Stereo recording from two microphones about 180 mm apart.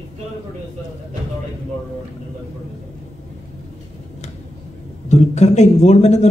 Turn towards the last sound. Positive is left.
turn(degrees=40)  # may be behind; listen again after turning